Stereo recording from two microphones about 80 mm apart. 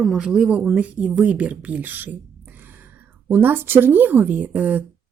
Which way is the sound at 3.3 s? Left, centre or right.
Right.